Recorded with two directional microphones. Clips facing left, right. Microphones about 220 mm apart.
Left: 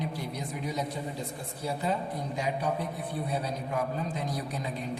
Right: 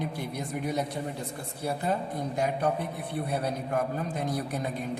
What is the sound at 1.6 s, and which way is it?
A man's voice, 60° right (ahead or behind).